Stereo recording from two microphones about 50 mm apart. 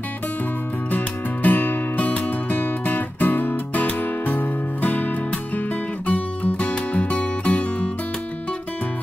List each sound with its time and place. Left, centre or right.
0.9 s music: left